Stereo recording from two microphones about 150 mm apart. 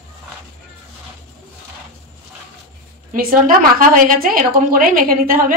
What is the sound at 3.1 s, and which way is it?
A woman's voice, 70° right (ahead or behind).